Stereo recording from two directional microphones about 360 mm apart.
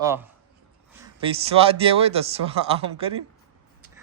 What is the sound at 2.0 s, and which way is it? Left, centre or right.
Speech, centre.